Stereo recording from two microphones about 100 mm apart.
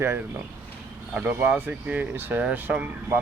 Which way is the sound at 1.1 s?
15° right (ahead or behind).